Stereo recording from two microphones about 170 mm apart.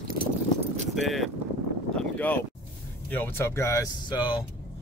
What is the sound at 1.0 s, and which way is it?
Speech, centre (ahead or behind).